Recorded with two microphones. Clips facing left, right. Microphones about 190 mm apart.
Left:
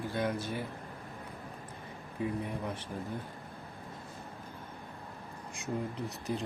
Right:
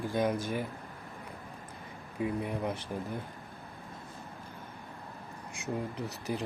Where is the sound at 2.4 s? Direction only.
10° right (ahead or behind).